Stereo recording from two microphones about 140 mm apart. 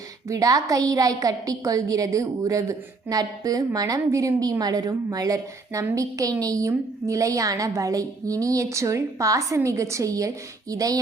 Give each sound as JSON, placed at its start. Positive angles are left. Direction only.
{"t": 0.3, "sound": "a woman's voice", "side_deg": -25}